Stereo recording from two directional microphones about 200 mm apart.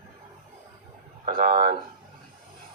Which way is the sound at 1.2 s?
50° right (ahead or behind).